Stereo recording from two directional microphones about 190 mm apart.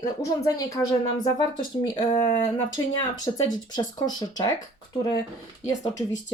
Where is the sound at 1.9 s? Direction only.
20° left (ahead or behind).